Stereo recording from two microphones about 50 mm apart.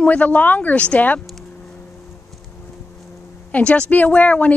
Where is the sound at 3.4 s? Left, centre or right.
Left.